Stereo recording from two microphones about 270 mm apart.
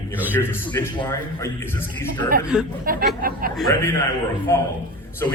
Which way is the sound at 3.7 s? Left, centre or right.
Centre.